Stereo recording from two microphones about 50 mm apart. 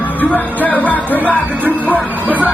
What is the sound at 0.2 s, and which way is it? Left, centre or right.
Music, left.